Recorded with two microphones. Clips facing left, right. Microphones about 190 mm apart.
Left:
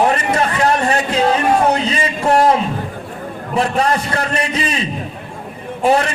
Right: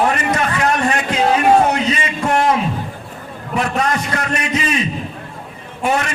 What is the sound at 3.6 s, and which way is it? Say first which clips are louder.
A man's voice: left 2 dB; 30° left (ahead or behind).